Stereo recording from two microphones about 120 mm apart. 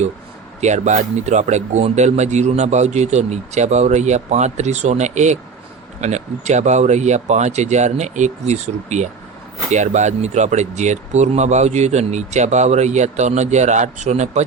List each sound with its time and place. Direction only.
0.6 s speech: 75° right (ahead or behind)